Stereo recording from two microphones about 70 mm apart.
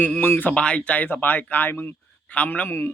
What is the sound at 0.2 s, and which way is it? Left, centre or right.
Speech, left.